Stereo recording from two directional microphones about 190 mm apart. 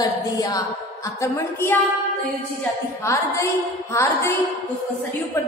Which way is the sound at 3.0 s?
15° left (ahead or behind).